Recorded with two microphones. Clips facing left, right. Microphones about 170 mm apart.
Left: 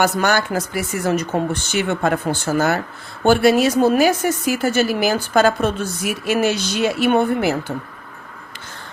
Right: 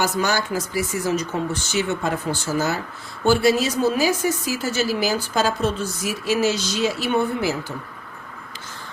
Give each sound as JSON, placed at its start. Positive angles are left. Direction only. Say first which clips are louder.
{"t": 0.0, "sound": "a woman's voice", "louder": "left 4 dB", "side_deg": 60}